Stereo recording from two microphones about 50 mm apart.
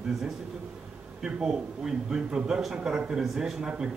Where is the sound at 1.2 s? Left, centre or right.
Centre.